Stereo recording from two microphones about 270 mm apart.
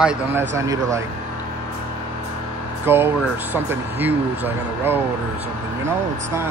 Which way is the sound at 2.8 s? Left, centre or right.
Centre.